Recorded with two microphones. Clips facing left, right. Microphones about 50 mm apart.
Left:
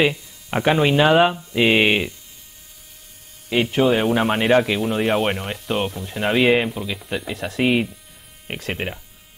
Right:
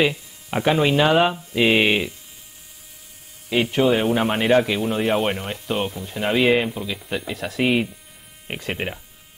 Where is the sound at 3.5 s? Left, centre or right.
Centre.